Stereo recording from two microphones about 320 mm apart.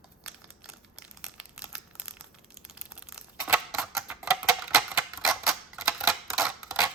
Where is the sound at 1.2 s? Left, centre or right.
Centre.